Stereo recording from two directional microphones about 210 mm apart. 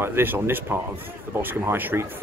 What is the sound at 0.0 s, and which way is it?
Speech, 10° right (ahead or behind).